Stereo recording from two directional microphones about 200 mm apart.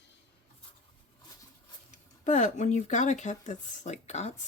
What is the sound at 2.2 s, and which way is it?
Speech, 35° left (ahead or behind).